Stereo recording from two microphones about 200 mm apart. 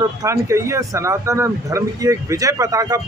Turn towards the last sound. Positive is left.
turn(degrees=-15)  # may be behind; listen again after turning